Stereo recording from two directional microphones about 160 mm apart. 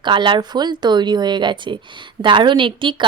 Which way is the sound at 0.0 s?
30° right (ahead or behind).